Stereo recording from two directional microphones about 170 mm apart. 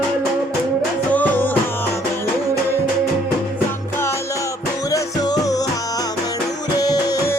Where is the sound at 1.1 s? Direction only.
10° left (ahead or behind).